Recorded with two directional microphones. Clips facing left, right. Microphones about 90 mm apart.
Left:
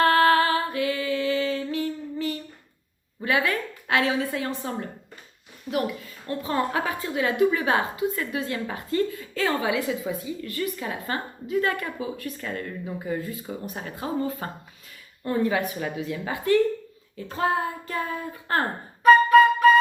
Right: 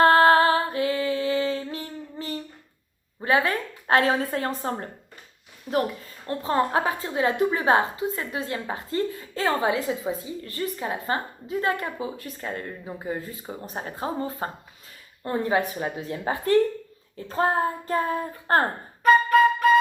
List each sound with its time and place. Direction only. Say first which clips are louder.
0.0 s a sound: right 3 dB; 30° right (ahead or behind)
3.2 s a woman's voice: right 2 dB; 30° right (ahead or behind)
5.7 s a woman's voice: right 2 dB; 5° right (ahead or behind)
6.2 s a woman's voice: right 2 dB; 35° right (ahead or behind)